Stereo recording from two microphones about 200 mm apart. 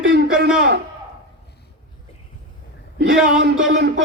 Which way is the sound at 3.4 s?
60° right (ahead or behind).